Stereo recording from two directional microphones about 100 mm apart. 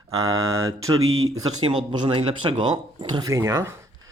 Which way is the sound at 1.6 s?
65° right (ahead or behind).